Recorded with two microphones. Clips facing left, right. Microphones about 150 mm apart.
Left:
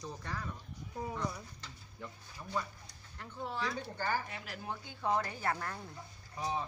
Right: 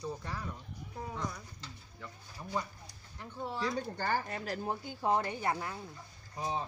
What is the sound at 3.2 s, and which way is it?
Speech, 15° right (ahead or behind).